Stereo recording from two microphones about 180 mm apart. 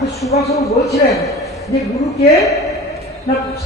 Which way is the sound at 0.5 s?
15° left (ahead or behind).